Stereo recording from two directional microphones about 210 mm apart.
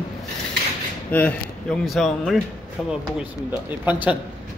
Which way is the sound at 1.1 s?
5° left (ahead or behind).